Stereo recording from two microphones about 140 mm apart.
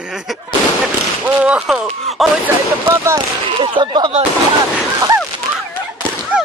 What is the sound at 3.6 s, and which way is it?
Speech, 35° right (ahead or behind).